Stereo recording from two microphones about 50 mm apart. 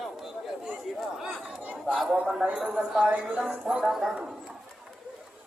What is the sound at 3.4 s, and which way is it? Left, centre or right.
Speech, centre.